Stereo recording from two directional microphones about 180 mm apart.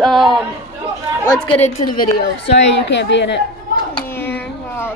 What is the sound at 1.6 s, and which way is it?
Speech, 50° left (ahead or behind).